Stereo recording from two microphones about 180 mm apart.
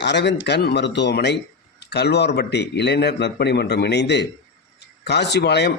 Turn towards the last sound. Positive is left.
turn(degrees=70)  # may be behind; listen again after turning